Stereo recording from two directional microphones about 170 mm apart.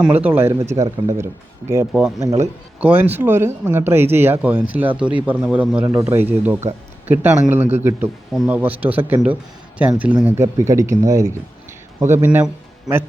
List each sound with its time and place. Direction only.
0.0 s speech: 10° right (ahead or behind)
2.1 s speech: 20° right (ahead or behind)